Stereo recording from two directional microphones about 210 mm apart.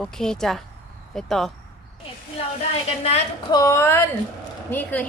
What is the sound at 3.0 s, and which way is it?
Speech, 30° left (ahead or behind).